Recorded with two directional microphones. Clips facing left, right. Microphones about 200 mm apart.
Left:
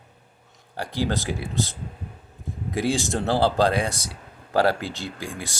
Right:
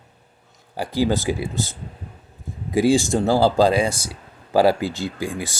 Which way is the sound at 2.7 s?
Centre (ahead or behind).